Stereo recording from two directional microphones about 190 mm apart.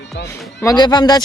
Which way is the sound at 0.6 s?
20° left (ahead or behind).